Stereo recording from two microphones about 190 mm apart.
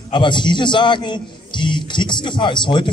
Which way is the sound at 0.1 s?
25° left (ahead or behind).